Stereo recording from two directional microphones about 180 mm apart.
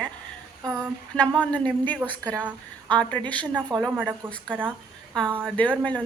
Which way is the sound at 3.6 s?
20° right (ahead or behind).